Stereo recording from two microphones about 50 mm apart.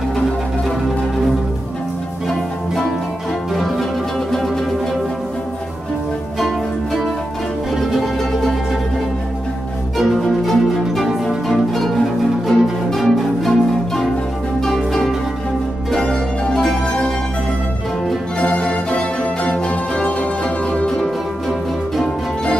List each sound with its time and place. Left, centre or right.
2.2 s music: centre
6.4 s music: centre
9.9 s music: centre
16.0 s music: centre
18.4 s music: left
21.9 s music: centre